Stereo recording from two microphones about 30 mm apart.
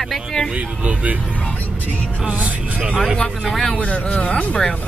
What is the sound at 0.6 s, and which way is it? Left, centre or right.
Speech, right.